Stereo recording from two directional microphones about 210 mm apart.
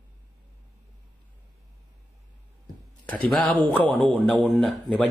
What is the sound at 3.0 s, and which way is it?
A man's voice, 5° left (ahead or behind).